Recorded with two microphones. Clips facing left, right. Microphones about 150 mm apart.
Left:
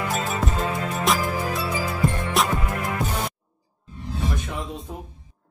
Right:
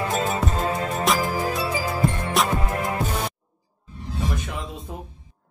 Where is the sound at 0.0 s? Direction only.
35° right (ahead or behind).